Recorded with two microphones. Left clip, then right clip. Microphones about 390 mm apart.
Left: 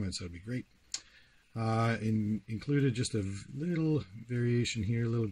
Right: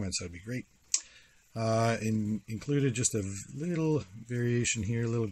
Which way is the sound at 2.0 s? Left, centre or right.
Right.